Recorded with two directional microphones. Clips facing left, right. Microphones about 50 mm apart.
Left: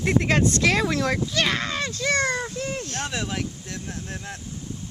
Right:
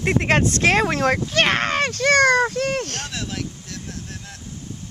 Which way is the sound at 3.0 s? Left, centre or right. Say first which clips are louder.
Left 1 dB; left.